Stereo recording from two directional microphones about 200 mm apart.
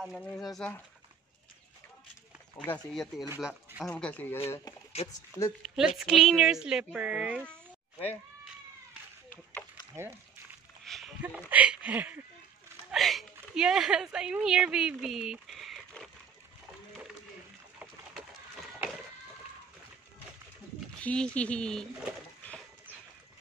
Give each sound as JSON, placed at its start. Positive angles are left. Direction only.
{"t": 0.0, "sound": "speech", "side_deg": 5}
{"t": 2.6, "sound": "speech", "side_deg": 5}
{"t": 3.9, "sound": "speech", "side_deg": 5}
{"t": 5.0, "sound": "speech", "side_deg": 30}
{"t": 5.8, "sound": "speech", "side_deg": -5}
{"t": 9.3, "sound": "a sound", "side_deg": 10}
{"t": 10.9, "sound": "a sound", "side_deg": 0}
{"t": 11.2, "sound": "a woman's voice", "side_deg": -5}
{"t": 17.7, "sound": "a sound", "side_deg": -5}
{"t": 21.0, "sound": "speech", "side_deg": 5}